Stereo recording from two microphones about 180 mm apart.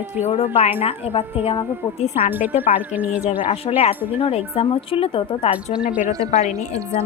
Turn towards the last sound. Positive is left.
turn(degrees=-15)  # may be behind; listen again after turning